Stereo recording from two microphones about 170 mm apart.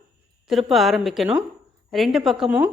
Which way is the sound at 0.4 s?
Centre (ahead or behind).